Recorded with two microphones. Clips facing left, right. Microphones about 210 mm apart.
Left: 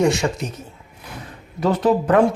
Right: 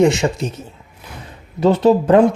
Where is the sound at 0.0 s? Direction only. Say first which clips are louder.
Right 4 dB; 25° right (ahead or behind).